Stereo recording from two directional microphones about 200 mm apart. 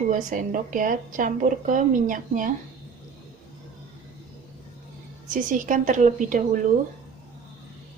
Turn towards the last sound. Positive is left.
turn(degrees=-40)  # may be behind; listen again after turning